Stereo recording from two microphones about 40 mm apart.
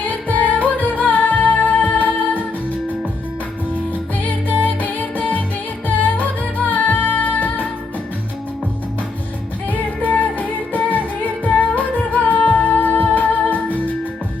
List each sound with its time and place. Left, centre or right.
0.1 s music: left
4.2 s music: left
9.6 s music: left